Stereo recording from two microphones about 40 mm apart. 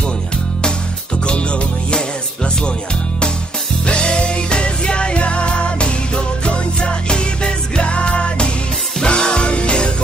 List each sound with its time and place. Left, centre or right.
1.2 s music: left
3.8 s music: left